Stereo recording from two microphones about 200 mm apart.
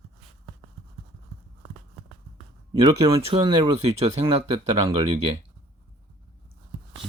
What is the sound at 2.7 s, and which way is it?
Speech, 25° right (ahead or behind).